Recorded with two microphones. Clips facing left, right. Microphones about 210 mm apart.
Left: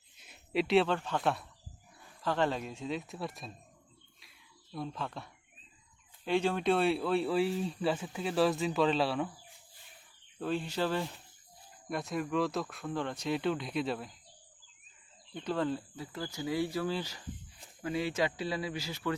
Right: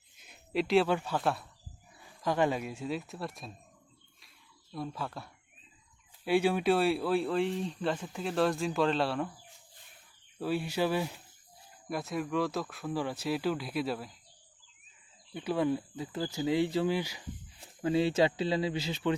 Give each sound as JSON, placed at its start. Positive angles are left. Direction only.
{"t": 0.2, "sound": "a sound", "side_deg": 0}
{"t": 0.9, "sound": "speech", "side_deg": -10}
{"t": 2.2, "sound": "speech", "side_deg": -10}
{"t": 4.7, "sound": "speech", "side_deg": -5}
{"t": 10.3, "sound": "speech", "side_deg": -5}
{"t": 15.3, "sound": "speech", "side_deg": -10}
{"t": 17.8, "sound": "speech", "side_deg": -30}